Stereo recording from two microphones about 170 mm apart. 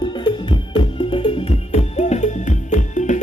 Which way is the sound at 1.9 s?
45° left (ahead or behind).